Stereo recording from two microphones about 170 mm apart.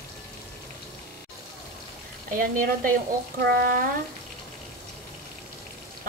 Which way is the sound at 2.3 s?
55° right (ahead or behind).